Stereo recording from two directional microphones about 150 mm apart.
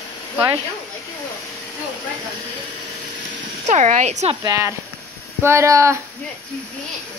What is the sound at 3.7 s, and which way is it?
Speech, 55° right (ahead or behind).